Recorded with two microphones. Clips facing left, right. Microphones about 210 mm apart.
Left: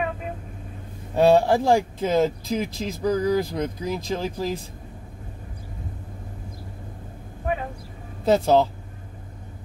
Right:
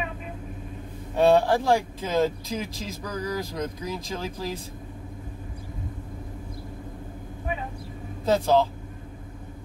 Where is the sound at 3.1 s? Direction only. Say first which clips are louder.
Left 10 dB; 30° left (ahead or behind).